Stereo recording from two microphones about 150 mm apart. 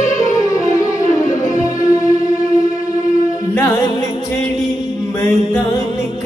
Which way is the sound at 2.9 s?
60° left (ahead or behind).